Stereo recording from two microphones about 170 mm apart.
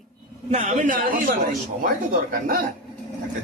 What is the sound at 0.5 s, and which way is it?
A man's voice, 45° right (ahead or behind).